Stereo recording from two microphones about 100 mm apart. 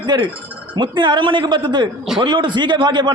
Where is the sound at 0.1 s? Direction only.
45° right (ahead or behind).